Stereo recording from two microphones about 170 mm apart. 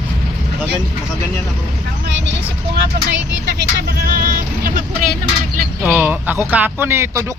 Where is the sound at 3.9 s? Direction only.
60° right (ahead or behind).